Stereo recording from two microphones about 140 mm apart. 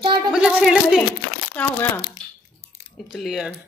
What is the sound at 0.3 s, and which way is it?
Speech, 10° right (ahead or behind).